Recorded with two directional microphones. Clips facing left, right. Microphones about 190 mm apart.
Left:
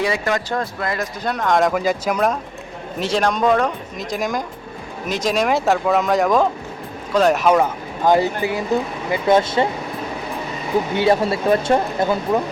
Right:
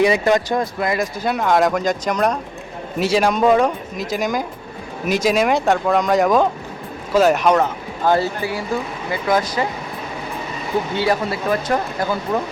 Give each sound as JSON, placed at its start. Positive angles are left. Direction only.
{"t": 0.0, "sound": "speech", "side_deg": -20}
{"t": 3.0, "sound": "speech", "side_deg": -5}
{"t": 10.9, "sound": "speech", "side_deg": 25}